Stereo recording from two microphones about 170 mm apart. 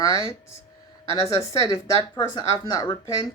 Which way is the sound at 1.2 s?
35° left (ahead or behind).